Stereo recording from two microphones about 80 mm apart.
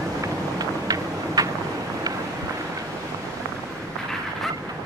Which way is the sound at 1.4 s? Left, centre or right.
Right.